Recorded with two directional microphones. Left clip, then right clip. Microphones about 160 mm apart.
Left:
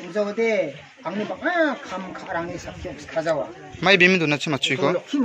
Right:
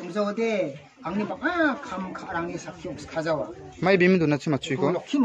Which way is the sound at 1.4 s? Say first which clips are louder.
Left 3 dB; 20° right (ahead or behind).